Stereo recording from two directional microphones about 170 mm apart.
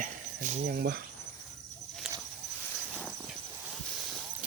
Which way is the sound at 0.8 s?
65° right (ahead or behind).